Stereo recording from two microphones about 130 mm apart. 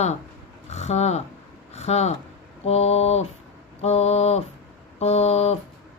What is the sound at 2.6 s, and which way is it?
Speech, 55° left (ahead or behind).